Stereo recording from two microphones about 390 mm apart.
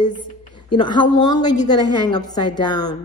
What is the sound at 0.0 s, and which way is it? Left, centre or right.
A woman's voice, centre.